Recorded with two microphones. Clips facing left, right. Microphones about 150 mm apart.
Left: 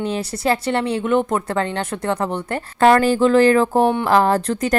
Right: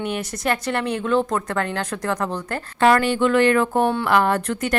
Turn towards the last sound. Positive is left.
turn(degrees=35)  # may be behind; listen again after turning